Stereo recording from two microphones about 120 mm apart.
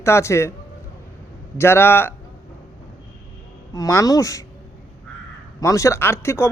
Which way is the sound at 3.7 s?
25° left (ahead or behind).